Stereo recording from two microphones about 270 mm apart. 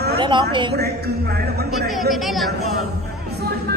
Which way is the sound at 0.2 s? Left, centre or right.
Centre.